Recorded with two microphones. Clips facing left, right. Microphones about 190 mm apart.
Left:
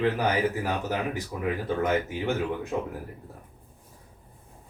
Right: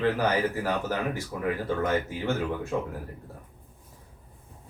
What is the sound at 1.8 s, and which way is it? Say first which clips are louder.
Speech: left 2 dB; 15° left (ahead or behind).